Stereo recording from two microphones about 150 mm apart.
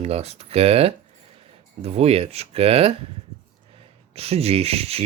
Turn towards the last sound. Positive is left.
turn(degrees=-40)  # may be behind; listen again after turning